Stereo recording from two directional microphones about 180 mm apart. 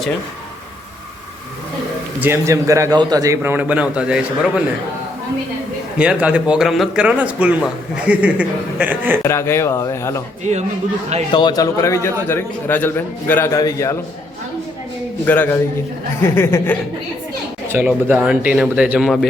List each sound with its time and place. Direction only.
2.2 s a man's voice: 15° right (ahead or behind)
6.0 s a man's voice: 5° right (ahead or behind)
9.2 s a man's voice: 15° left (ahead or behind)
11.3 s a man's voice: 25° left (ahead or behind)
15.3 s a man's voice: 10° left (ahead or behind)
17.7 s a man's voice: 10° right (ahead or behind)